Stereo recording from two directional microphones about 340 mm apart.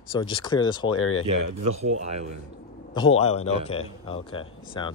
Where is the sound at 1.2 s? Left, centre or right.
Right.